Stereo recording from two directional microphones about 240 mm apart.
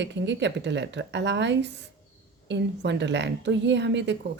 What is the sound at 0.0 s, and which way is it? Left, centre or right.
Speech, right.